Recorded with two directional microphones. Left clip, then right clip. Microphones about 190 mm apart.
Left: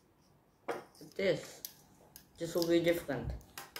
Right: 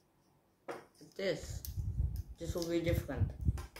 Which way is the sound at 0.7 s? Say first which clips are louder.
Left 5 dB; 15° left (ahead or behind).